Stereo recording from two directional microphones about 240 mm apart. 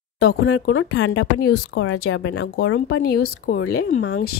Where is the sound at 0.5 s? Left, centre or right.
Left.